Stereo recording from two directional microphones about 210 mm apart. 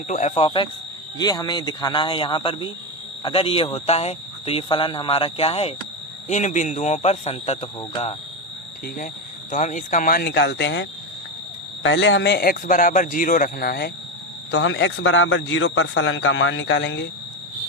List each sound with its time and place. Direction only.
0.1 s a man's voice: 35° left (ahead or behind)
9.5 s a man's voice: 35° left (ahead or behind)
14.5 s speech: 60° left (ahead or behind)